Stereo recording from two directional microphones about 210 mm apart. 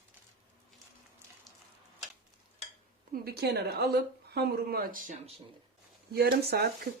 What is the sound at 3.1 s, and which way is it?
Speech, 50° right (ahead or behind).